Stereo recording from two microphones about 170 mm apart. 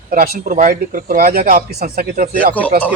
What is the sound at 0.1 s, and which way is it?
Speech, 55° right (ahead or behind).